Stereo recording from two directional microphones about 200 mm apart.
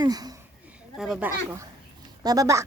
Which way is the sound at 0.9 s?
Centre (ahead or behind).